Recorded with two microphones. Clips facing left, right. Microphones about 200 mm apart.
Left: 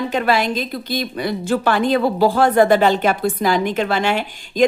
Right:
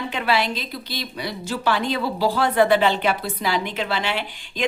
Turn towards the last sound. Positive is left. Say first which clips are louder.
# left 8 dB
turn(degrees=45)  # may be behind; listen again after turning